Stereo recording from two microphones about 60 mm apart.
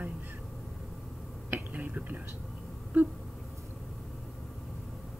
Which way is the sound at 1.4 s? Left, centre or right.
Right.